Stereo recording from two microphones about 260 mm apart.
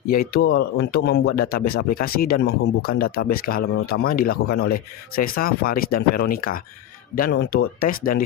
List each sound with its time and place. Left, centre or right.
0.1 s speech: left